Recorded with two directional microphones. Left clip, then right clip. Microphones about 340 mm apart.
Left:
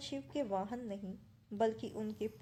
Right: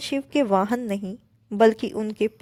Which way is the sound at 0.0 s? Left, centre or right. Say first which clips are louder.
Right 16 dB; right.